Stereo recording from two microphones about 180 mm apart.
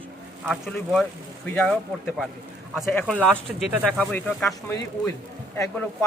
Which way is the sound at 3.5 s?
5° right (ahead or behind).